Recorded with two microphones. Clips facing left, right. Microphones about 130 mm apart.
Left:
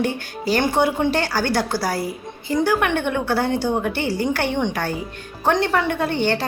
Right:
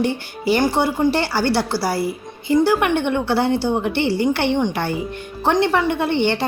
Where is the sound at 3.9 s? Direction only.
45° left (ahead or behind).